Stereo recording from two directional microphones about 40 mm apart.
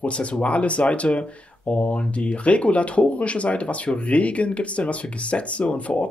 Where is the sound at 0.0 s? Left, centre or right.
Left.